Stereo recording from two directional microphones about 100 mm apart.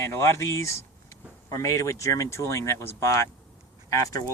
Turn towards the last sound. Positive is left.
turn(degrees=35)  # may be behind; listen again after turning